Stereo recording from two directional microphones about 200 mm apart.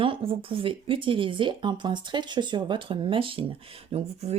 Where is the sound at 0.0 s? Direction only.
25° right (ahead or behind).